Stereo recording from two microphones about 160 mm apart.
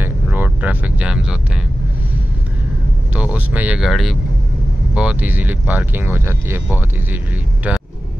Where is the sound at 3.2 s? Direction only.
10° right (ahead or behind).